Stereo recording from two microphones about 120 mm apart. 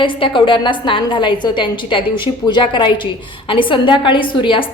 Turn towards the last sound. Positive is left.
turn(degrees=45)  # may be behind; listen again after turning